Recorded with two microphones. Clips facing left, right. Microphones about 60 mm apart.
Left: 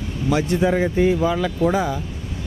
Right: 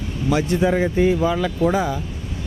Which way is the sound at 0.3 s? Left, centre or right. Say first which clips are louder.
Even; right.